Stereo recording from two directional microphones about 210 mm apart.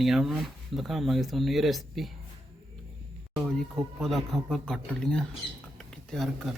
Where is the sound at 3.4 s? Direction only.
Centre (ahead or behind).